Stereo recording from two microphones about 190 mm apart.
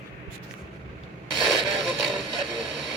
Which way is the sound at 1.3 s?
Centre (ahead or behind).